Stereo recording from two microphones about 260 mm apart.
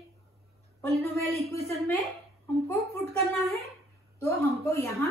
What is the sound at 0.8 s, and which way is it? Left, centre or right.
Speech, right.